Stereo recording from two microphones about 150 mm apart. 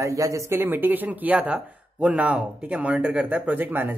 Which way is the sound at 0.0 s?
20° right (ahead or behind).